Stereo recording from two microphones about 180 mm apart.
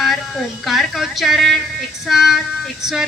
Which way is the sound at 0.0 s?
Centre (ahead or behind).